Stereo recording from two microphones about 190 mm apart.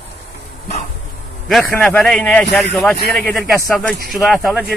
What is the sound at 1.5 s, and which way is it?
Speech, 5° left (ahead or behind).